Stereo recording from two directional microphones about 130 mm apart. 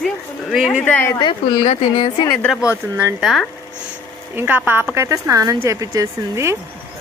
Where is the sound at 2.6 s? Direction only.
15° right (ahead or behind).